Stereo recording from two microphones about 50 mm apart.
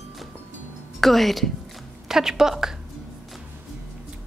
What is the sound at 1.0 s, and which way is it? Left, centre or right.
Speech, centre.